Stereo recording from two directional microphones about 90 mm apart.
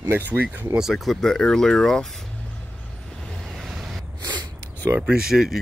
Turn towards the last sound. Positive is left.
turn(degrees=-5)  # may be behind; listen again after turning